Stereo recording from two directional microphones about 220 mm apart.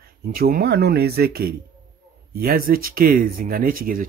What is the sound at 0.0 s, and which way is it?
Speech, 40° right (ahead or behind).